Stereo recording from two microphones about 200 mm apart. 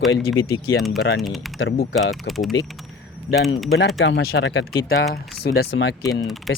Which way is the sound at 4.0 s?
60° left (ahead or behind).